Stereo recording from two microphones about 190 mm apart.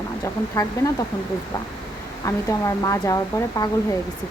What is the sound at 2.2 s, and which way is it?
Speech, 15° left (ahead or behind).